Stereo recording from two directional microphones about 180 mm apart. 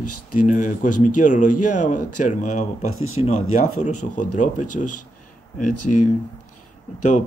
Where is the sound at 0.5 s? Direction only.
45° left (ahead or behind).